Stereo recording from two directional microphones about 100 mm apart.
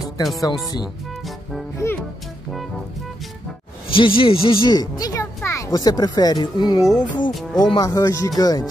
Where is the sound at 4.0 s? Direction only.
60° left (ahead or behind).